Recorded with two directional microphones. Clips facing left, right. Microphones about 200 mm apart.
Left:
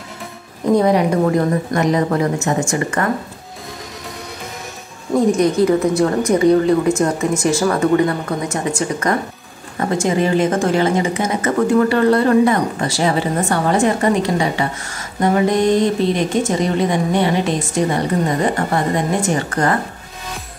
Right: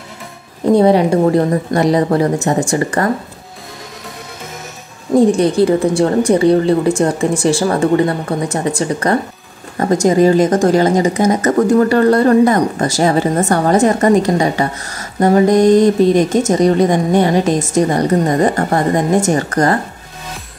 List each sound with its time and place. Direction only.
0.7 s speech: 30° right (ahead or behind)
5.1 s speech: 30° right (ahead or behind)